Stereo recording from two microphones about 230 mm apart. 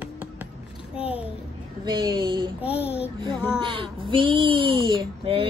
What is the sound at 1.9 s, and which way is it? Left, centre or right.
Speech, centre.